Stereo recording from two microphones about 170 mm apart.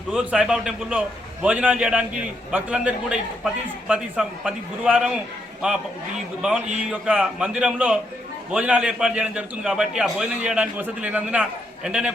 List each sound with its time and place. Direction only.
0.1 s a man's voice: 5° right (ahead or behind)
6.8 s a man's voice: 5° right (ahead or behind)